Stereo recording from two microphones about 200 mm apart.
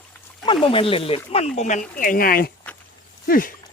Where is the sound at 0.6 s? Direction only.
25° left (ahead or behind); by 3.5 s 45° left (ahead or behind).